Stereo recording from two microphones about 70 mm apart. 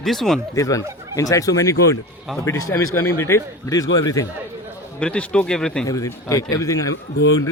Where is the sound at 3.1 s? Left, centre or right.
Left.